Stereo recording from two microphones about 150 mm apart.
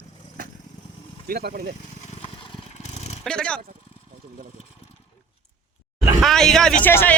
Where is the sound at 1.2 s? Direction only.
80° right.